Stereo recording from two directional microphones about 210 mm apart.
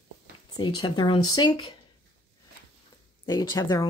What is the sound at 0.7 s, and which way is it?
Speech, 20° left (ahead or behind).